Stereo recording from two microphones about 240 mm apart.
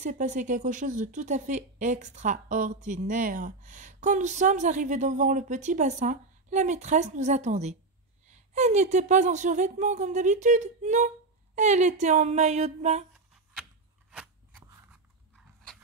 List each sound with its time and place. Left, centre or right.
0.0 s a woman's voice: right
14.1 s crunch: centre